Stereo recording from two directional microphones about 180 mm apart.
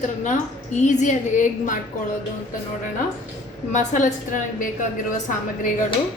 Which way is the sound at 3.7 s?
40° left (ahead or behind).